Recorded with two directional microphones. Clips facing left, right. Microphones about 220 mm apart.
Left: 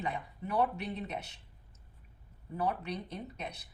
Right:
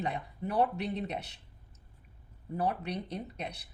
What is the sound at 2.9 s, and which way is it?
Speech, 35° right (ahead or behind).